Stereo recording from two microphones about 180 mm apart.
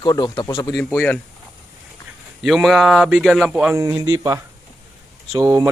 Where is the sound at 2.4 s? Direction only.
Centre (ahead or behind).